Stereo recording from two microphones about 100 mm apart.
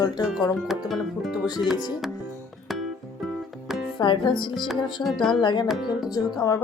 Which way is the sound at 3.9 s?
50° left (ahead or behind).